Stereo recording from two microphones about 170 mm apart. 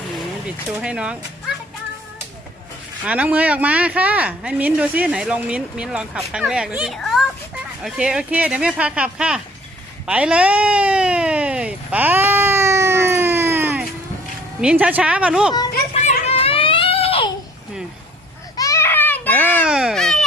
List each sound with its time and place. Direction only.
0.4 s speech: 5° right (ahead or behind)
3.0 s speech: 10° right (ahead or behind)
10.1 s a sound: 5° right (ahead or behind)
14.6 s speech: 5° right (ahead or behind)
16.0 s a sound: 40° left (ahead or behind)
18.5 s baby cry: 20° left (ahead or behind)
19.6 s baby cry: 5° right (ahead or behind)